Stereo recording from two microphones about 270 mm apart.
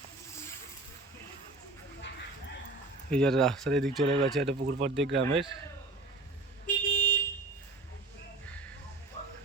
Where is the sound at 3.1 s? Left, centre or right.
Centre.